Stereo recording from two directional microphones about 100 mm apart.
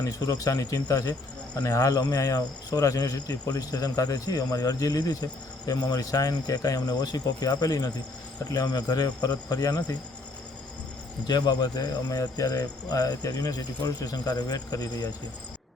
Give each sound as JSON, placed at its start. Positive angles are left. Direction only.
{"t": 0.0, "sound": "speech", "side_deg": 35}
{"t": 11.3, "sound": "speech", "side_deg": 45}